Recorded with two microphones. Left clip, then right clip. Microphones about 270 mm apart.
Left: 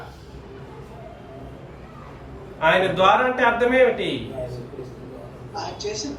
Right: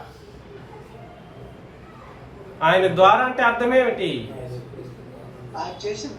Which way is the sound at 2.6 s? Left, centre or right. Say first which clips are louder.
Right 2 dB; centre.